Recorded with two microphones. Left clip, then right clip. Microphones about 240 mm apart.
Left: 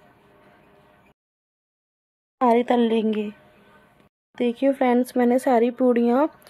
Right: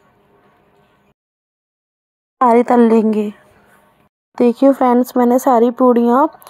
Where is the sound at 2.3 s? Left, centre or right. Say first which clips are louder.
Right 8 dB; centre.